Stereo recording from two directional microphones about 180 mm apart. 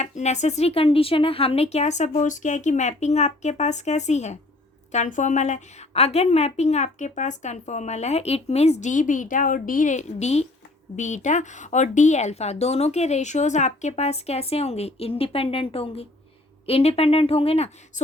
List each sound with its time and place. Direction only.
0.0 s a woman's voice: 40° left (ahead or behind)